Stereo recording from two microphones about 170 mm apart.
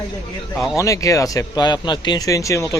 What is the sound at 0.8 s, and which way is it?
Speech, 20° left (ahead or behind).